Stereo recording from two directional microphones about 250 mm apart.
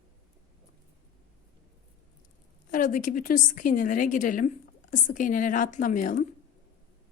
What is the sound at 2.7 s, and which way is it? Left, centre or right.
A woman's voice, left.